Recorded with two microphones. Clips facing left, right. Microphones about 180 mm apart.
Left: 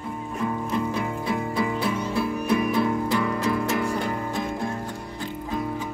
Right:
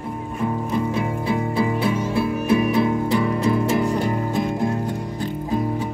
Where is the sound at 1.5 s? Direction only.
25° right (ahead or behind).